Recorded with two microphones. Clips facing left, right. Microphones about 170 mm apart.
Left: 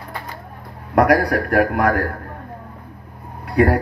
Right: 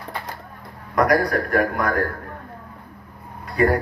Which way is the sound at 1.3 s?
60° left (ahead or behind).